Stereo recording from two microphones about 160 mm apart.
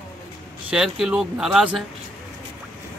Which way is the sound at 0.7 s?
5° right (ahead or behind).